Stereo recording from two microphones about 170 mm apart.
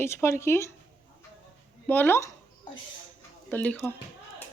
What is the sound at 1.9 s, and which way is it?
Speech, 10° left (ahead or behind).